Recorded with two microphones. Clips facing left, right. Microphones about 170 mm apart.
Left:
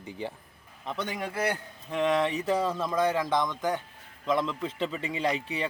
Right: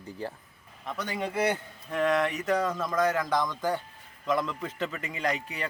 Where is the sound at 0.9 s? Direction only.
25° left (ahead or behind).